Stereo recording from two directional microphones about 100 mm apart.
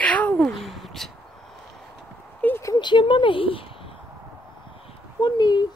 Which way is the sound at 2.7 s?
50° left (ahead or behind).